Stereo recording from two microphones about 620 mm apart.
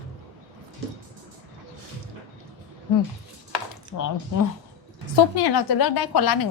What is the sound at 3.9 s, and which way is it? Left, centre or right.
A woman's voice, left.